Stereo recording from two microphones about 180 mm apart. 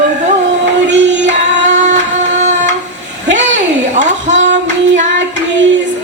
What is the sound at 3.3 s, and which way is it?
Child singing, 40° right (ahead or behind).